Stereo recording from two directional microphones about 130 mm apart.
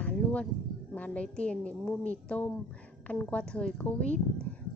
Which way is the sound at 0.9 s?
10° left (ahead or behind).